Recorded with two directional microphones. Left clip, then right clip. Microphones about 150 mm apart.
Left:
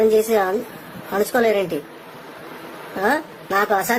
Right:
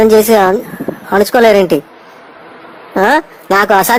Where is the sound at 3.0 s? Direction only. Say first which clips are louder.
Right 10 dB; 45° right (ahead or behind).